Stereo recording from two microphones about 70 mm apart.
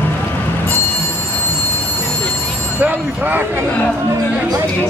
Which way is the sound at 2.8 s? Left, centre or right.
Right.